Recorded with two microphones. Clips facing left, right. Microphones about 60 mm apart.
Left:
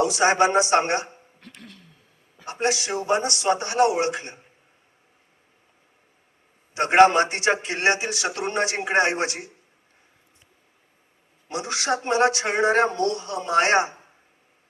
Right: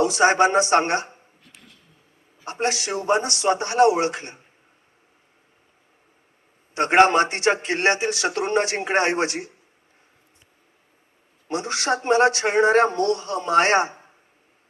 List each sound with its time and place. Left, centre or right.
0.0 s speech: right
1.4 s a sound: left
2.4 s speech: right
6.7 s speech: right
11.4 s speech: right